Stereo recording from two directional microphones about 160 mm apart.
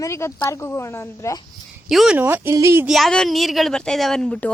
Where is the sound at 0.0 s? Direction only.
15° left (ahead or behind).